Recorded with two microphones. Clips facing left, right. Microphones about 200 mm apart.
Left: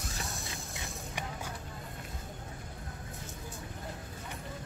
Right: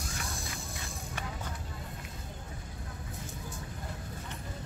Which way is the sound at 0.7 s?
15° left (ahead or behind).